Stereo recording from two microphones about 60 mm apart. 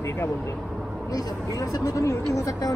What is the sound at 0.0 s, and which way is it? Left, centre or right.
Vehicle, left.